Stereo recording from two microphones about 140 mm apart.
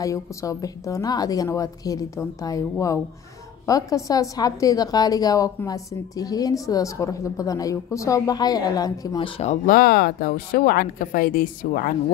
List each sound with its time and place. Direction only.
0.0 s a woman's voice: 25° left (ahead or behind)
9.2 s speech: 50° left (ahead or behind)
9.7 s a woman's voice: 90° left